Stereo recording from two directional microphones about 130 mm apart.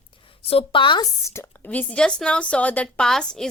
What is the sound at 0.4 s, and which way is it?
Speech, 45° left (ahead or behind).